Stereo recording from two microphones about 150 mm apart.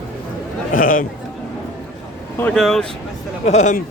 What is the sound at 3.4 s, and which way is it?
Speech, 50° left (ahead or behind).